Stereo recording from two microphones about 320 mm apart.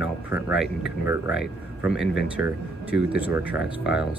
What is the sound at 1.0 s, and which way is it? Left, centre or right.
Speech, centre.